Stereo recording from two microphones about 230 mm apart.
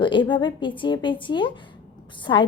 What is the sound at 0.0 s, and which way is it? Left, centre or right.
A woman's voice, left.